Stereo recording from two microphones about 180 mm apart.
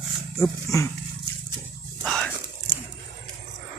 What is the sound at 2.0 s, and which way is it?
Whispering, 5° left (ahead or behind).